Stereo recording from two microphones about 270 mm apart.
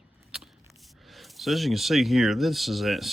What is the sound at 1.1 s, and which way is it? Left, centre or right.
Speech, centre.